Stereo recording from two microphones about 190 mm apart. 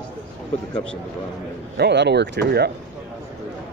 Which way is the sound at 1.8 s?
65° right (ahead or behind).